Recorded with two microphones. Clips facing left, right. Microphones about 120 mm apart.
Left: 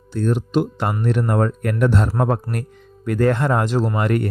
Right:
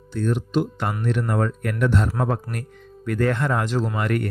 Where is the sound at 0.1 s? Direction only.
40° left (ahead or behind).